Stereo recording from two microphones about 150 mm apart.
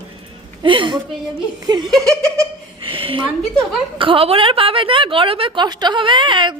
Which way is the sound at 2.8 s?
35° right (ahead or behind).